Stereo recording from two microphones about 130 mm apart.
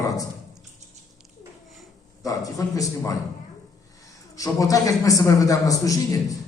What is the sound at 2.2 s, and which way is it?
Speech, 25° left (ahead or behind).